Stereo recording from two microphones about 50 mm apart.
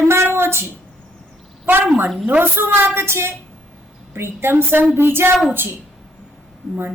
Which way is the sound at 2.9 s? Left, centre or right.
Right.